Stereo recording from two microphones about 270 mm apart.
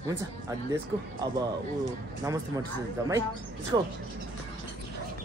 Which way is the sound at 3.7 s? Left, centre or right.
Centre.